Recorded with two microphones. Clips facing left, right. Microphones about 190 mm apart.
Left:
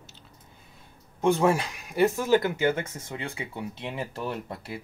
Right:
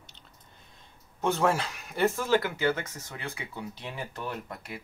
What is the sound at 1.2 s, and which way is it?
Speech, 10° left (ahead or behind).